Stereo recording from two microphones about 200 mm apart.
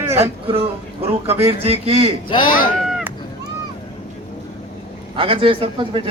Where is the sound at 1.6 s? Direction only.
30° right (ahead or behind).